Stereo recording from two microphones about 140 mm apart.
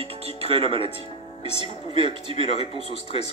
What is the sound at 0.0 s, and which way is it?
Music, 45° right (ahead or behind).